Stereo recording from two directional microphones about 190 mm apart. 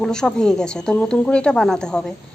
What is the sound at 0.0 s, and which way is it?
Speech, 5° left (ahead or behind).